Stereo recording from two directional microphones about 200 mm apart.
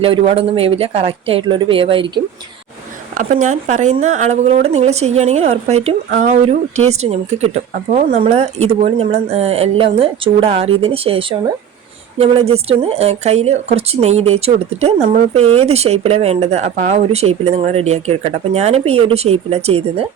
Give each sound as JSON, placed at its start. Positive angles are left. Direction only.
{"t": 0.0, "sound": "a woman's voice", "side_deg": -30}
{"t": 3.2, "sound": "a woman's voice", "side_deg": -40}